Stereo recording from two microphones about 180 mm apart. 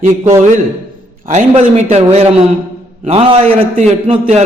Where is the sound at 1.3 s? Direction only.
40° right (ahead or behind).